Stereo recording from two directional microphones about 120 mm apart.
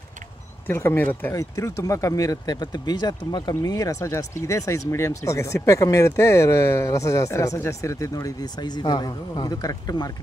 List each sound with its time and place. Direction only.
0.7 s speech: 15° left (ahead or behind)
1.3 s speech: 25° left (ahead or behind)